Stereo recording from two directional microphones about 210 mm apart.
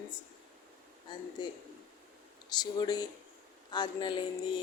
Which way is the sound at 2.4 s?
20° left (ahead or behind).